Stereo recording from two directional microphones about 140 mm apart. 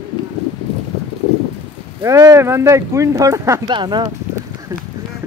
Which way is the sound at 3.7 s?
35° right (ahead or behind).